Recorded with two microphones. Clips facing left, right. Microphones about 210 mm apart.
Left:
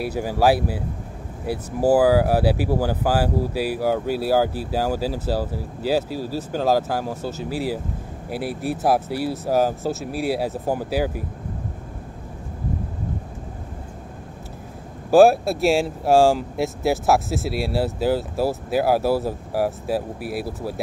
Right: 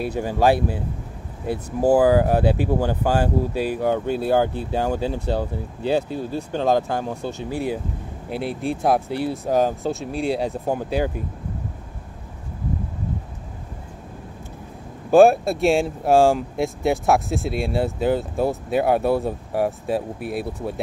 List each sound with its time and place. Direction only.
0.0 s speech: 10° left (ahead or behind)
15.0 s speech: centre (ahead or behind)